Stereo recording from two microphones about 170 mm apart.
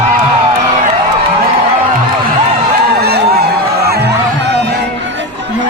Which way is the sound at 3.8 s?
70° right (ahead or behind).